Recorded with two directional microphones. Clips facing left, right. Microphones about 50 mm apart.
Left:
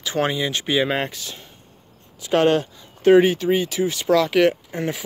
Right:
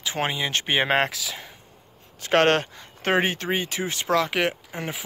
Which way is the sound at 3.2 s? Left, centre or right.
Right.